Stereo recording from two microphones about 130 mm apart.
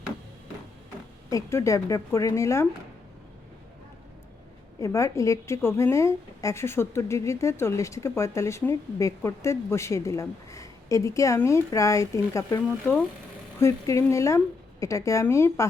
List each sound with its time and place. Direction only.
1.3 s a woman's voice: 25° left (ahead or behind)
4.8 s a woman's voice: 20° left (ahead or behind)